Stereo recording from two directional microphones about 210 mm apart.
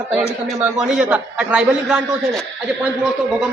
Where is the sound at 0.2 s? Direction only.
5° right (ahead or behind).